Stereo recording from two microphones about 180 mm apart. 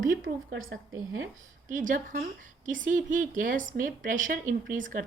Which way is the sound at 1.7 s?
45° right (ahead or behind).